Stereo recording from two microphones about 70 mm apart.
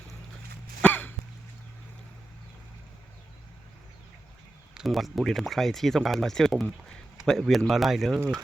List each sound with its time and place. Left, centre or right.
0.8 s cough: left
4.7 s speech: centre